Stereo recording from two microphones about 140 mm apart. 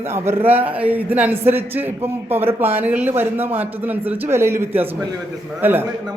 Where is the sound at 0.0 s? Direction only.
15° right (ahead or behind).